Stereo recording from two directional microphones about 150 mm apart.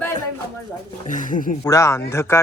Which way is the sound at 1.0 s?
60° left (ahead or behind).